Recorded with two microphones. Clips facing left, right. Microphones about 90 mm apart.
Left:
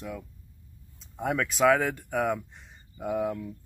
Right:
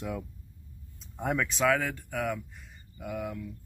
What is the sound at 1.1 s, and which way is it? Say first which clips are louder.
Speech: left 1 dB; centre (ahead or behind).